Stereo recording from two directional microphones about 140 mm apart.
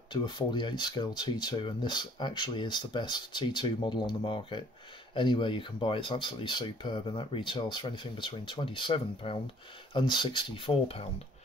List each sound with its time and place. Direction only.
0.1 s speech: 35° left (ahead or behind)